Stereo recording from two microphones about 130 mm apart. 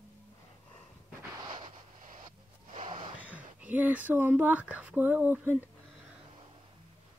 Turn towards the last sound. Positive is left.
turn(degrees=-15)  # may be behind; listen again after turning